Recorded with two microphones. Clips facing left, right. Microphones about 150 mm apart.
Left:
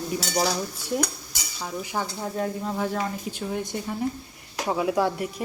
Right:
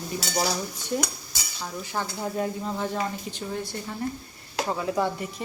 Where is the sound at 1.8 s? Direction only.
10° left (ahead or behind).